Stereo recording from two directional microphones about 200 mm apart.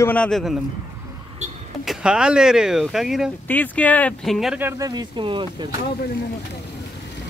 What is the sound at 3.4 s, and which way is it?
Speech, 10° left (ahead or behind).